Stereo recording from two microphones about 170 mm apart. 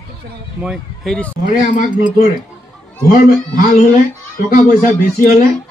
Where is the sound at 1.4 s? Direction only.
50° left (ahead or behind).